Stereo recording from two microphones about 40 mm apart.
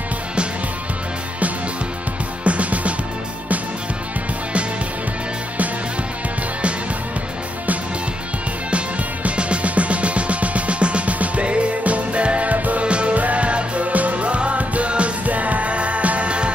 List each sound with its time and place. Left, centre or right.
2.4 s music: right
8.7 s music: right
12.8 s music: right